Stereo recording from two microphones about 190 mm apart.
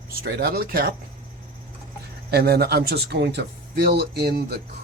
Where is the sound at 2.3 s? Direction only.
55° right (ahead or behind).